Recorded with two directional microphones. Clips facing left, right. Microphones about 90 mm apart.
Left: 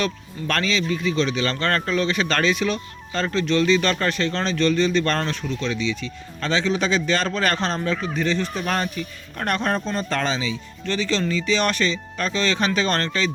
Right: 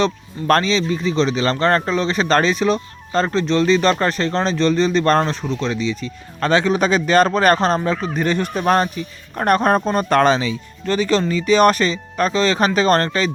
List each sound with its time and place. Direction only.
0.6 s speech: 30° right (ahead or behind)
6.4 s speech: 50° right (ahead or behind)
8.6 s speech: 40° right (ahead or behind)
9.6 s speech: 50° right (ahead or behind)